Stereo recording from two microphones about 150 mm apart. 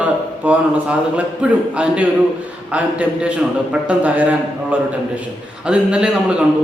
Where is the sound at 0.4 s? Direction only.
10° right (ahead or behind).